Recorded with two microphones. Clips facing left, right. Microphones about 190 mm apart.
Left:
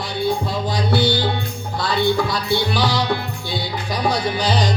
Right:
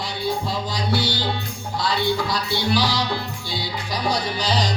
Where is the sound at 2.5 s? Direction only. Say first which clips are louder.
Left 2 dB; 55° left (ahead or behind).